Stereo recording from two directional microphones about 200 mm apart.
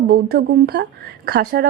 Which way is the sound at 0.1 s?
55° right (ahead or behind).